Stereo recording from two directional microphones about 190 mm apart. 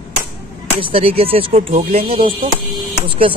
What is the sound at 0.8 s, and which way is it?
Speech, 30° right (ahead or behind).